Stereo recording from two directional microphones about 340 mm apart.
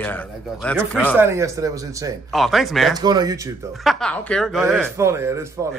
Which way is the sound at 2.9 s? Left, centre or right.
Centre.